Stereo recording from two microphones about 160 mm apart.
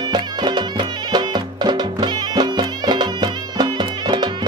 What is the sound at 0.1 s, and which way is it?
Music, 25° right (ahead or behind).